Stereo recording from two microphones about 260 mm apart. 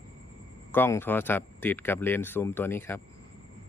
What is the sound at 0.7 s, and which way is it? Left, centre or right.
Speech, centre.